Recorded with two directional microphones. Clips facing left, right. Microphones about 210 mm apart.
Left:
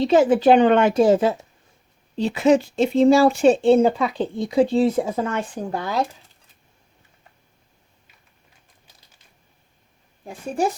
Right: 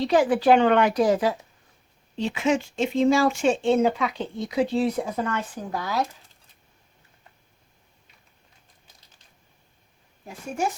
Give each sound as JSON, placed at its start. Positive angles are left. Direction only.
{"t": 0.0, "sound": "speech", "side_deg": 25}
{"t": 10.6, "sound": "speech", "side_deg": 35}